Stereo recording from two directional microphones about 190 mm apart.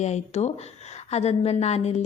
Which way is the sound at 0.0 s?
35° left (ahead or behind).